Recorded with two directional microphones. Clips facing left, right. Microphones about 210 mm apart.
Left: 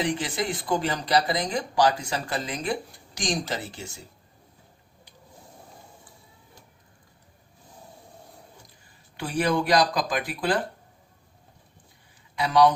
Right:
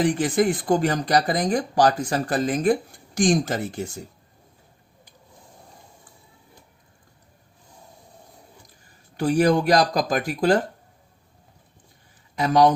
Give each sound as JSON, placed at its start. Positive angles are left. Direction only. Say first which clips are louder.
{"t": 0.0, "sound": "speech", "louder": "right 7 dB", "side_deg": -45}
{"t": 9.1, "sound": "speech", "louder": "right 6 dB", "side_deg": -40}
{"t": 12.4, "sound": "speech", "louder": "right 2 dB", "side_deg": -45}